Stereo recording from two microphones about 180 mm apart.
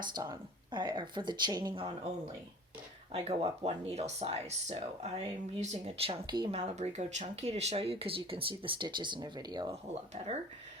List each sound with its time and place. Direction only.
0.0 s speech: 25° right (ahead or behind)
6.6 s speech: 40° right (ahead or behind); by 9.7 s 25° right (ahead or behind)
9.9 s speech: 35° right (ahead or behind)